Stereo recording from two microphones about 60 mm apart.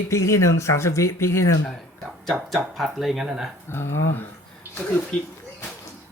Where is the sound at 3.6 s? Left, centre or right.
Left.